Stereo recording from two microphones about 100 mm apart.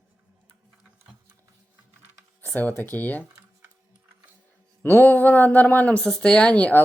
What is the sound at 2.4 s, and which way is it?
Speech, 15° left (ahead or behind).